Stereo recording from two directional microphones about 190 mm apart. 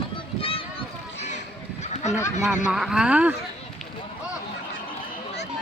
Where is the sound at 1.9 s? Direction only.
35° left (ahead or behind).